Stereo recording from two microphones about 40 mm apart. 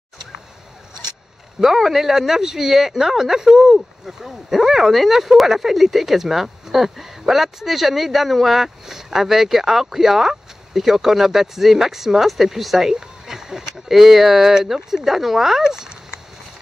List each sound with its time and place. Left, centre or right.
1.8 s speech: centre
12.9 s speech: centre